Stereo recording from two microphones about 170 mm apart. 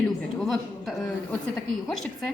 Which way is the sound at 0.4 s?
Centre (ahead or behind).